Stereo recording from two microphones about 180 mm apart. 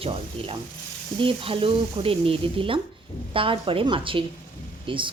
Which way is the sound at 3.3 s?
30° right (ahead or behind).